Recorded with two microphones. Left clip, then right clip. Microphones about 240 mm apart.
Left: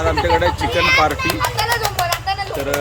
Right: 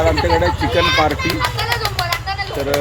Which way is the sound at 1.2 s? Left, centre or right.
Left.